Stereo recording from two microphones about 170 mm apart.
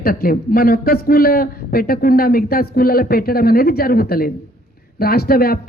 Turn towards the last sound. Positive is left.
turn(degrees=65)  # may be behind; listen again after turning